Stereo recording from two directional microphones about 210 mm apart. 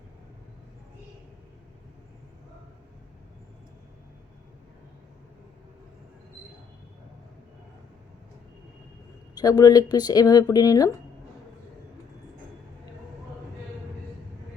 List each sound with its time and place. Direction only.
9.3 s speech: 20° left (ahead or behind)